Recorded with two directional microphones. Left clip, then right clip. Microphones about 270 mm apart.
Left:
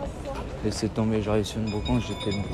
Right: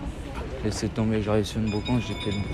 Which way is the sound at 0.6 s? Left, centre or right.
Centre.